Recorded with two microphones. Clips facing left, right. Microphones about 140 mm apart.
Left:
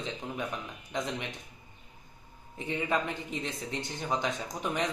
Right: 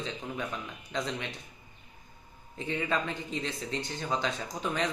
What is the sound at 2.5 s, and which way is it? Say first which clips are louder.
A man's voice: even; 15° left (ahead or behind).